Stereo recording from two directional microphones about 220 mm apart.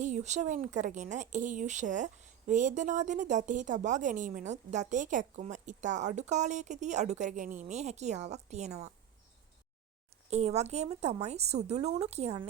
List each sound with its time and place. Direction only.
0.0 s speech: 30° right (ahead or behind)
10.2 s speech: 30° right (ahead or behind)